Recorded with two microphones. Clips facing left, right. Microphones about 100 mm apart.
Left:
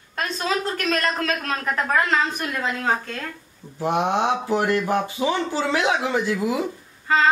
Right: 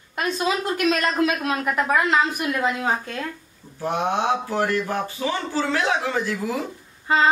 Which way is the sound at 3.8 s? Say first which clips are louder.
Left 2 dB; 20° left (ahead or behind).